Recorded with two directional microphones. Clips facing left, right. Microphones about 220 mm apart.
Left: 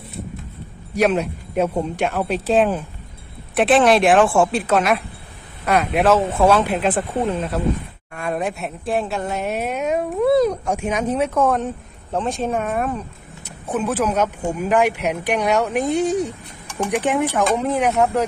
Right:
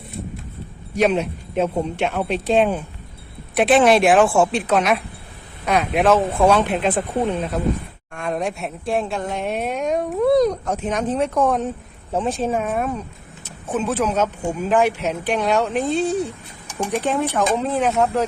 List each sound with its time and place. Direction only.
0.9 s a woman's voice: centre (ahead or behind)
6.0 s a woman's voice: 5° left (ahead or behind)